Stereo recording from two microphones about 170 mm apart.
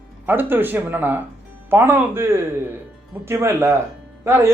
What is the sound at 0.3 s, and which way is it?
Speech, 10° right (ahead or behind).